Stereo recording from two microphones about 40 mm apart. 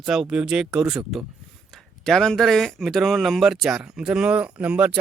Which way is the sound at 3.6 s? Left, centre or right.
Centre.